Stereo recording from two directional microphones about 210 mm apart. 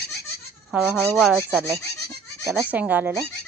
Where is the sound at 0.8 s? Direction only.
10° left (ahead or behind).